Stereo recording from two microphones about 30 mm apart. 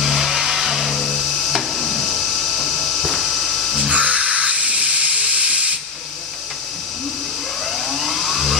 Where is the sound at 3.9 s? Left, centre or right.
Right.